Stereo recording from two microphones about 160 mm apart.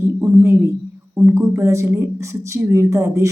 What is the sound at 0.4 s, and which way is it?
A woman's voice, 15° right (ahead or behind).